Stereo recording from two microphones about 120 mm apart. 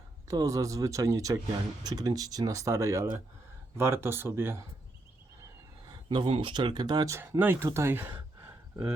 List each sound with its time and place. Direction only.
0.3 s speech: 30° right (ahead or behind)
5.9 s speech: 40° right (ahead or behind)
7.2 s speech: 15° right (ahead or behind)